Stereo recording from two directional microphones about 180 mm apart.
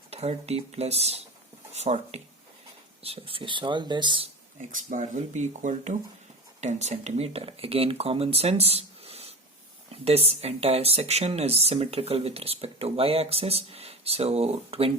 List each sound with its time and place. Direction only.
0.1 s speech: 35° right (ahead or behind)
4.7 s speech: 45° right (ahead or behind)